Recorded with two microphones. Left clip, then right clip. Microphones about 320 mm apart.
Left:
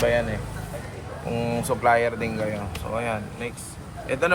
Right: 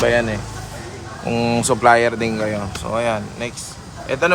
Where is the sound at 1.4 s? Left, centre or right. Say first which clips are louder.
Right 8 dB; right.